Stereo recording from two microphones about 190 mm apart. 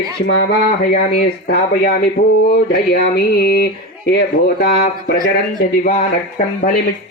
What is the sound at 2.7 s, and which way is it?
Speech, 50° left (ahead or behind).